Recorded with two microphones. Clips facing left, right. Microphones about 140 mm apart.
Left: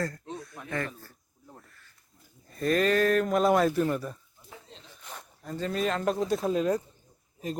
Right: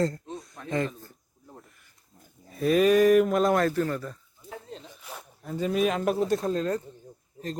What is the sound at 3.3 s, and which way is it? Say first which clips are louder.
Speech: even; centre (ahead or behind).